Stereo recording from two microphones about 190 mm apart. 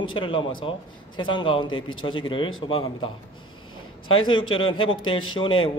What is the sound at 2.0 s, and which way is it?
A man's voice, 25° left (ahead or behind).